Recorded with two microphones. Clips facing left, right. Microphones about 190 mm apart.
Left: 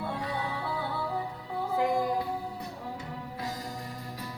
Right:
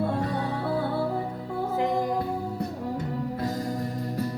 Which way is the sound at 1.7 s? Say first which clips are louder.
Right 1 dB; 20° right (ahead or behind).